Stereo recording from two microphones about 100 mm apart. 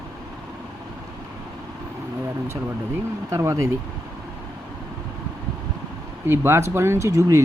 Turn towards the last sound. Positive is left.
turn(degrees=-30)  # may be behind; listen again after turning